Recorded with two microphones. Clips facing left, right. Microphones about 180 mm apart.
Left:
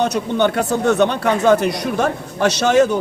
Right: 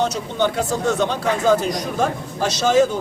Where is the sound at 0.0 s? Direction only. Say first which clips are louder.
Left 4 dB; 60° left (ahead or behind).